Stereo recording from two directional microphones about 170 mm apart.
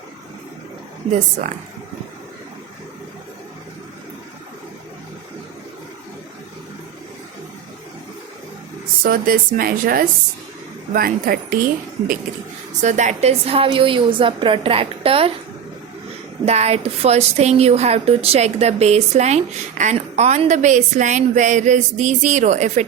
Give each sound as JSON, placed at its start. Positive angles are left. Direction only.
{"t": 9.0, "sound": "speech", "side_deg": -55}
{"t": 12.8, "sound": "a woman's voice", "side_deg": -45}
{"t": 16.5, "sound": "a woman's voice", "side_deg": -40}